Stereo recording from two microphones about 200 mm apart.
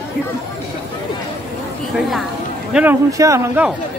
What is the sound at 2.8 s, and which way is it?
Speech, 15° right (ahead or behind).